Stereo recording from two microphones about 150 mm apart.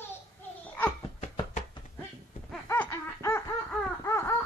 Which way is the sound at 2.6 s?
15° left (ahead or behind).